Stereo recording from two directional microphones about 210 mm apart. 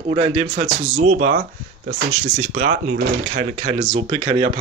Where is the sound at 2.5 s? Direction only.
40° right (ahead or behind).